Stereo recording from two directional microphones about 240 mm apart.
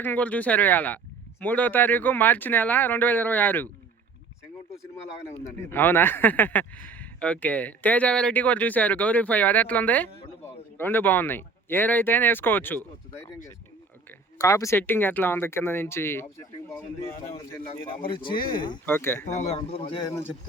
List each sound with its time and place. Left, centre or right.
0.0 s speech: centre
5.3 s speech: centre
14.3 s speech: centre
18.1 s a man's voice: left
18.3 s speech: left
18.9 s speech: centre
19.3 s a man's voice: left